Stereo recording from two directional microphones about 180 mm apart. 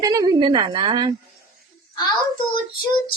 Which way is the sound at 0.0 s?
20° right (ahead or behind).